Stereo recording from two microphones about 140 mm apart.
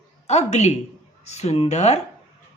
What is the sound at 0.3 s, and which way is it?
A woman's voice, 50° left (ahead or behind).